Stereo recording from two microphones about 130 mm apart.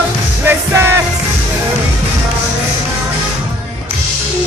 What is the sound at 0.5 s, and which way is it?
Music, 15° right (ahead or behind).